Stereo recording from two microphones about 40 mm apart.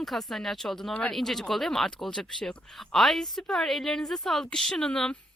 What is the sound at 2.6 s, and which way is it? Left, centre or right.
Speech, centre.